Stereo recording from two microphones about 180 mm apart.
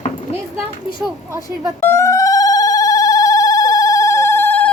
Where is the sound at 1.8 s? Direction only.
15° left (ahead or behind).